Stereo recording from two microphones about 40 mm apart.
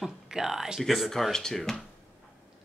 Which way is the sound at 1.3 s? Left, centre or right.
Centre.